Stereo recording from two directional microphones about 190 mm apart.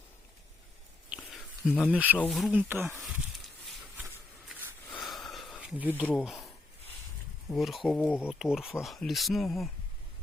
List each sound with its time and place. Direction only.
1.1 s a sound: 5° right (ahead or behind)
1.7 s speech: 5° left (ahead or behind)
2.0 s speech: 10° right (ahead or behind)
2.9 s snake: centre (ahead or behind)
4.9 s a sound: centre (ahead or behind)
6.1 s speech: centre (ahead or behind)
7.5 s speech: centre (ahead or behind)
8.3 s speech: centre (ahead or behind)